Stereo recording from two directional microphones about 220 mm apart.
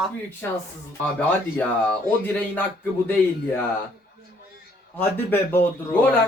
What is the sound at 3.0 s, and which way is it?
Speech, 10° left (ahead or behind).